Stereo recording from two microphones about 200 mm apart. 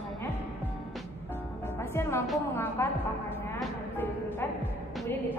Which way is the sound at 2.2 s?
Centre (ahead or behind).